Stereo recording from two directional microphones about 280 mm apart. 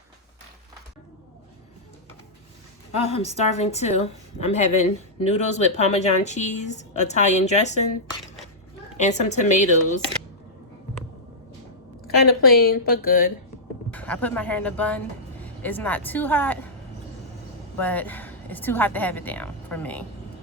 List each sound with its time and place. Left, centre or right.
2.9 s speech: left
9.0 s speech: left
12.0 s a woman's voice: left
13.9 s speech: centre
17.7 s a woman's voice: centre